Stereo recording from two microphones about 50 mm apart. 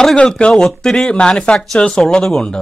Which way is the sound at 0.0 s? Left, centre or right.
Centre.